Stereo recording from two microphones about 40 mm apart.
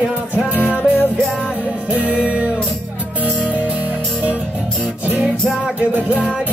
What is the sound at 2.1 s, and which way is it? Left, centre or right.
Music, right.